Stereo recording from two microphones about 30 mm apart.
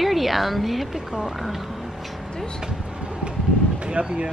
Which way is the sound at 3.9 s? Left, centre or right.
Right.